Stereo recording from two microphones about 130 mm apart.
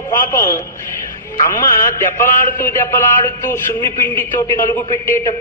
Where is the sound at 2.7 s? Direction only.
20° left (ahead or behind).